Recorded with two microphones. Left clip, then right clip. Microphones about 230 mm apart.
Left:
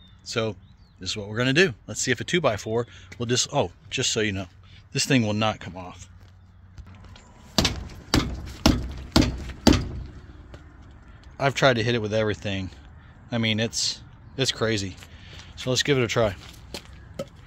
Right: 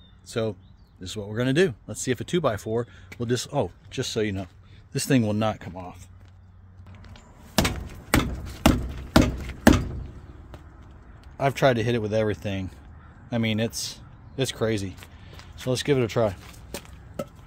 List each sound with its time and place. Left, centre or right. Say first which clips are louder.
0.3 s speech: left 1 dB; centre
8.6 s a sound: right 1 dB; centre
11.3 s speech: left 1 dB; centre